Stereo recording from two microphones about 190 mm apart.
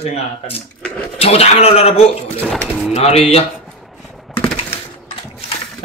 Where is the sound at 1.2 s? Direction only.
30° left (ahead or behind).